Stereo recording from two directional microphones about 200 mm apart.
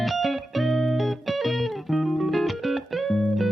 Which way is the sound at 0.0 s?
Centre (ahead or behind).